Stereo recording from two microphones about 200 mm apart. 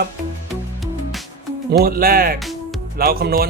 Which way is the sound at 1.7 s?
45° right (ahead or behind).